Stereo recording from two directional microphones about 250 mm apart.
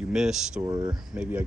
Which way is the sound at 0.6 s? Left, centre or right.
Centre.